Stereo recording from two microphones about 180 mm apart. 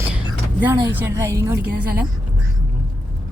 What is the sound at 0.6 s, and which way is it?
A woman's voice, 10° right (ahead or behind).